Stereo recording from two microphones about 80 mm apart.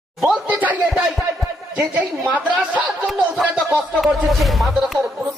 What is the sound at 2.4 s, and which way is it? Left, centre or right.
A man's voice, centre.